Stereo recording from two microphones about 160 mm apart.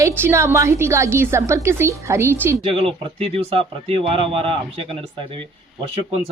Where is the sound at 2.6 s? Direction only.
35° right (ahead or behind).